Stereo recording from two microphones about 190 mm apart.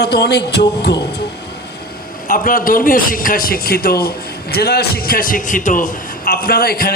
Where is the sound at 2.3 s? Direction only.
50° left (ahead or behind).